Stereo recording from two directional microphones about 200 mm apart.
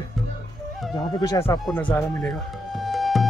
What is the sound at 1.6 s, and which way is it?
Music, 5° left (ahead or behind).